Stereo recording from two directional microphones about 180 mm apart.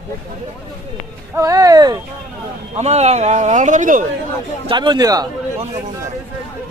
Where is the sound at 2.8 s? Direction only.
35° right (ahead or behind).